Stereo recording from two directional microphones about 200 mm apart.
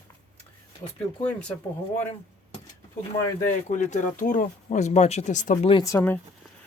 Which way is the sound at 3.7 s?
35° left (ahead or behind).